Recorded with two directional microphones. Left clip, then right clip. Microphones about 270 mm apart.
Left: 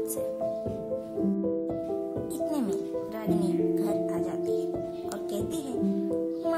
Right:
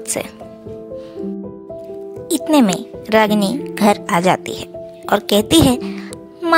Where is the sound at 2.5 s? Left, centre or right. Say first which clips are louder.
Right 14 dB; left.